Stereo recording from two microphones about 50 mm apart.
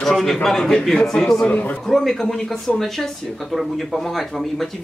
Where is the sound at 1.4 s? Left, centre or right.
Left.